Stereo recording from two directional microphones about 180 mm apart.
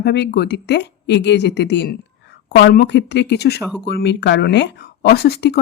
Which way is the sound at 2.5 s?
65° left (ahead or behind).